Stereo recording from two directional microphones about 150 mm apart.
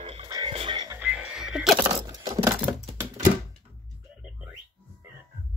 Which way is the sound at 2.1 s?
25° right (ahead or behind).